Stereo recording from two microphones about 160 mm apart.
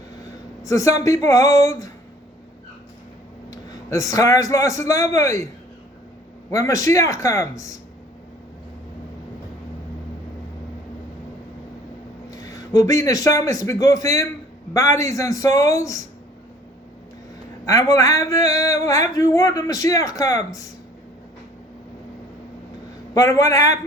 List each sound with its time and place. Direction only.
0.6 s a man's voice: 20° left (ahead or behind)
3.5 s a man's voice: 20° left (ahead or behind)
6.5 s speech: 20° left (ahead or behind)
12.3 s a man's voice: 20° left (ahead or behind)
17.7 s speech: 20° left (ahead or behind)
23.1 s speech: 20° left (ahead or behind)